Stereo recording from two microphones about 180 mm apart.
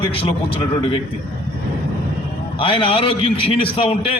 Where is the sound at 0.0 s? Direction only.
30° left (ahead or behind).